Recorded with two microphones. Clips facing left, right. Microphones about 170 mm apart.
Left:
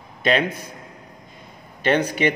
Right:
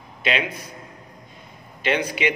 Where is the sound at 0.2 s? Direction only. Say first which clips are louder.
Left 5 dB; 45° left (ahead or behind).